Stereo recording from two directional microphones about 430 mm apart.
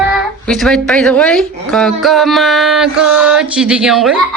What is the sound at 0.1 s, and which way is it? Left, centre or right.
Speech, centre.